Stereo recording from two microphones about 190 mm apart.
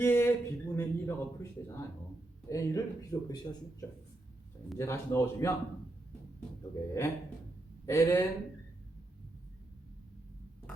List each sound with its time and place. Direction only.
0.0 s a man's voice: 10° left (ahead or behind)
6.8 s a man's voice: 15° left (ahead or behind)